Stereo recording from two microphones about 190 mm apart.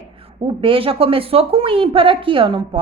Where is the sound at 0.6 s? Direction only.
30° right (ahead or behind).